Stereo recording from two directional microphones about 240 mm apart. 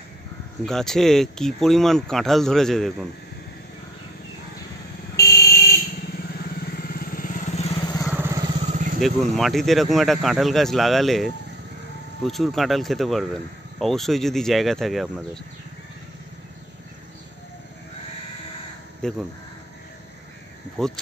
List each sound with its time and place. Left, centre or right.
0.7 s speech: centre
5.1 s buzzer: left
6.9 s vehicle: left; by 8.0 s centre
8.0 s vehicle: centre
8.5 s vehicle: right
9.0 s speech: centre
19.0 s speech: centre
20.7 s speech: centre